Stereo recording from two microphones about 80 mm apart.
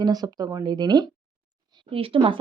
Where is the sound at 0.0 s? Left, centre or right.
Right.